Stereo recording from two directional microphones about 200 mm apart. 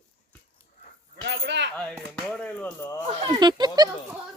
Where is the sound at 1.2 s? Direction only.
60° right (ahead or behind).